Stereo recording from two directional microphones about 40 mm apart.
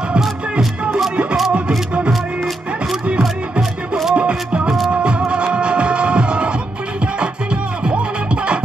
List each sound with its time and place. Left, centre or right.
0.2 s music: centre
4.1 s music: right